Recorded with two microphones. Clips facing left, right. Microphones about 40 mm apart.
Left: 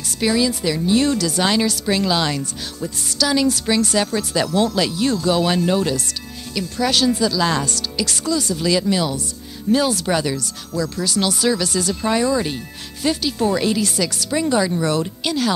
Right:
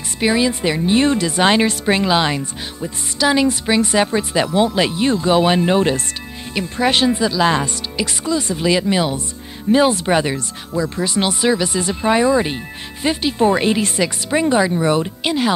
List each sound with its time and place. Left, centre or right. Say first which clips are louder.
0.2 s speech: right 2 dB; right